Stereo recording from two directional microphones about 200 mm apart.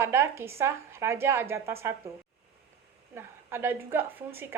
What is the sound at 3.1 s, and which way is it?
A woman's voice, 10° right (ahead or behind).